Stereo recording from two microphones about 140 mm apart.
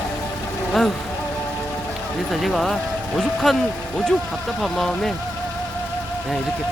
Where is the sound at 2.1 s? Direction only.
Centre (ahead or behind).